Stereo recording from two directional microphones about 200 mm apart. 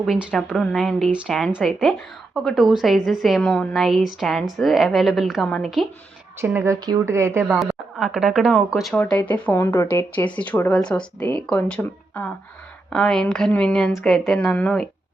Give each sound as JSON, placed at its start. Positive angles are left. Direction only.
{"t": 0.0, "sound": "a woman's voice", "side_deg": 0}
{"t": 6.4, "sound": "a woman's voice", "side_deg": -15}